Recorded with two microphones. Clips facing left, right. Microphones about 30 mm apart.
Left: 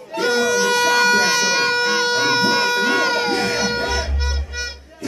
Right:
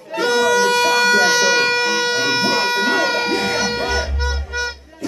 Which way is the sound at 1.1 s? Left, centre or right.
Right.